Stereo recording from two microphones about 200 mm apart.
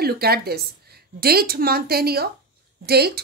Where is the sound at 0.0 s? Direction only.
50° right (ahead or behind).